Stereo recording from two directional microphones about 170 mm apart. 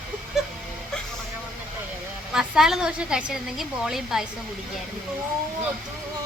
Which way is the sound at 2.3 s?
5° right (ahead or behind).